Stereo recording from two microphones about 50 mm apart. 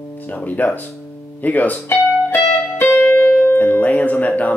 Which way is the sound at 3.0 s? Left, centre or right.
Left.